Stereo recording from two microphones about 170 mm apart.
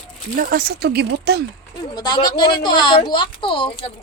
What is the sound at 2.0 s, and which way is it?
Speech, 25° left (ahead or behind).